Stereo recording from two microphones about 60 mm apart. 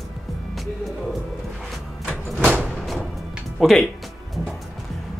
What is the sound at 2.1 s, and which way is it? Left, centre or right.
Door, right.